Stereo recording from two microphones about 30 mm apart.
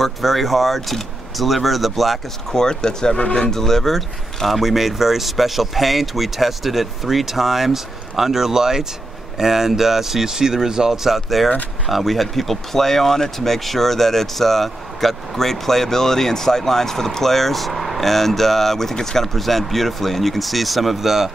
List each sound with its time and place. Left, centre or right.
0.0 s speech: centre
2.5 s speech: left; by 10.9 s centre
10.9 s speech: centre
18.0 s speech: centre
19.2 s speech: centre